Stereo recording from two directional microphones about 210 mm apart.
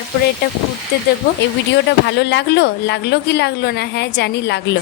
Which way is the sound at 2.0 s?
55° left (ahead or behind).